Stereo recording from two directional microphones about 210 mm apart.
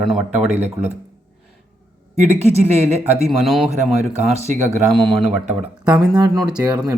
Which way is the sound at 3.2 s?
Centre (ahead or behind).